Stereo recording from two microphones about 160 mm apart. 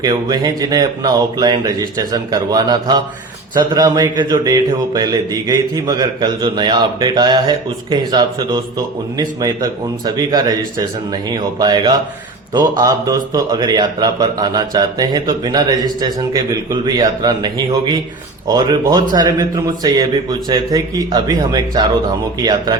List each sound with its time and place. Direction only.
0.0 s a man's voice: 25° right (ahead or behind)